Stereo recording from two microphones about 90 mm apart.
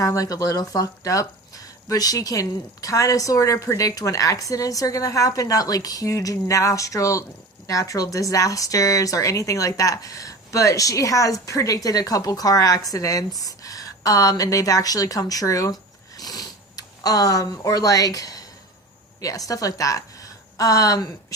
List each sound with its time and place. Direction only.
0.0 s a woman's voice: 40° left (ahead or behind)